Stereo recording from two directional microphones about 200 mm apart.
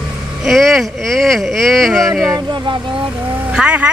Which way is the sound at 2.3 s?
25° right (ahead or behind).